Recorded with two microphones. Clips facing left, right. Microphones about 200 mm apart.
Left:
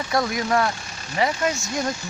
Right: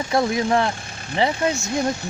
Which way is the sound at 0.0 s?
25° right (ahead or behind).